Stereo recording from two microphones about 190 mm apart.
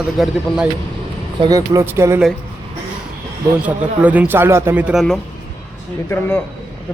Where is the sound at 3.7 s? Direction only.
10° right (ahead or behind).